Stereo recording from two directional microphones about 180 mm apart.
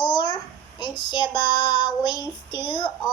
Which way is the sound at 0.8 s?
25° left (ahead or behind).